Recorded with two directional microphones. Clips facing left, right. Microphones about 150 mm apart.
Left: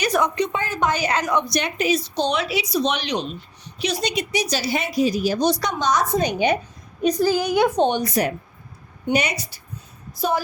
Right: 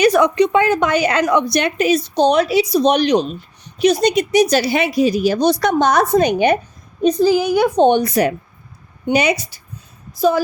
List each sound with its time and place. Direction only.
0.0 s a woman's voice: 70° right (ahead or behind)
7.0 s a woman's voice: 25° right (ahead or behind)
7.3 s a woman's voice: 5° right (ahead or behind)
7.9 s a woman's voice: 65° right (ahead or behind)